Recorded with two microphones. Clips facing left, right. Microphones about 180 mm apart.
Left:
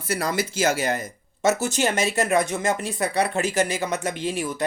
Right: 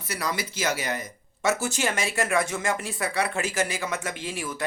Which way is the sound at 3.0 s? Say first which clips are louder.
Left 5 dB; 40° left (ahead or behind).